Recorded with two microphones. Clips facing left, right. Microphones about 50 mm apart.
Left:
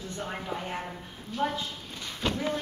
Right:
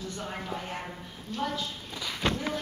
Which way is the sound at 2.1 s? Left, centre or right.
Right.